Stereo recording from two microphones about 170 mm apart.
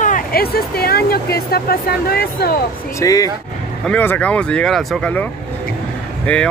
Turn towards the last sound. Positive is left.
turn(degrees=10)  # may be behind; listen again after turning